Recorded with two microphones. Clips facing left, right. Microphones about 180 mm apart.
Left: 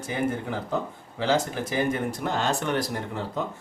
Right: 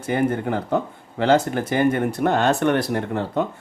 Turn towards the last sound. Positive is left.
turn(degrees=-60)  # may be behind; listen again after turning